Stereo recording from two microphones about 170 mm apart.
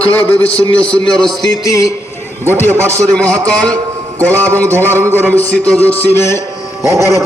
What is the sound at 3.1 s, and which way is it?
A man's voice, 5° left (ahead or behind).